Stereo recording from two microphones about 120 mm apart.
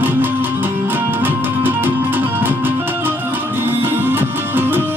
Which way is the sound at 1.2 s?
15° right (ahead or behind).